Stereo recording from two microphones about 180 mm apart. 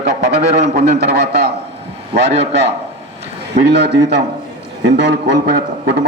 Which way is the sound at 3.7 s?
70° right (ahead or behind).